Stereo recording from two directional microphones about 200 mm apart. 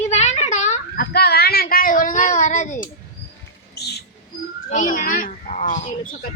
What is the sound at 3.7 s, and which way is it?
Bird, 55° left (ahead or behind).